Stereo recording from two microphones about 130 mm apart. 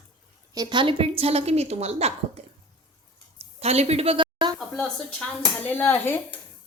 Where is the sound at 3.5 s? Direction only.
55° right (ahead or behind).